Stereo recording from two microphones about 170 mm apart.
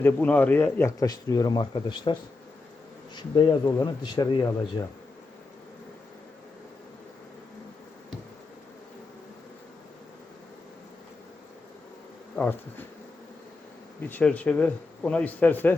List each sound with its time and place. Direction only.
0.0 s speech: 10° left (ahead or behind); by 2.1 s 25° left (ahead or behind)
3.2 s speech: 25° left (ahead or behind)
14.1 s speech: 10° left (ahead or behind)